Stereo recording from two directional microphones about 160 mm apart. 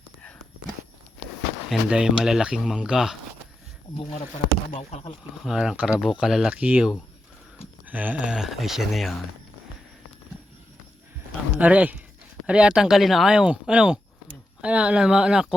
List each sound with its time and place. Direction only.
1.7 s speech: 5° right (ahead or behind)
4.7 s speech: 40° left (ahead or behind)
5.4 s speech: 5° right (ahead or behind)
11.5 s speech: 10° right (ahead or behind)